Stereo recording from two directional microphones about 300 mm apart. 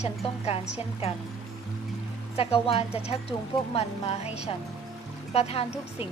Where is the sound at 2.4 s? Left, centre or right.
Centre.